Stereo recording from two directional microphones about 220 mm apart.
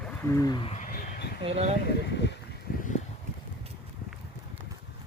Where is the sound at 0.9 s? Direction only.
40° left (ahead or behind).